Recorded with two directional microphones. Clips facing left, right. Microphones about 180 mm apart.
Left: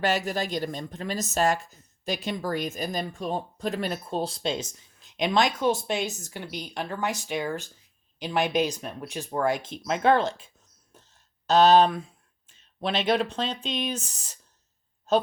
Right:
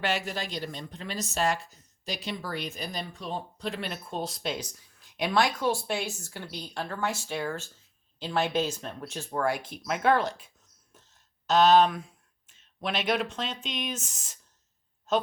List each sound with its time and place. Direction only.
0.0 s speech: 40° left (ahead or behind); by 10.5 s 25° left (ahead or behind)
10.9 s a sound: 30° left (ahead or behind)
11.4 s a woman's voice: 30° left (ahead or behind)